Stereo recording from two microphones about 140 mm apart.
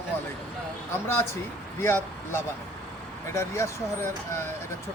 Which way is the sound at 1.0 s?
15° left (ahead or behind).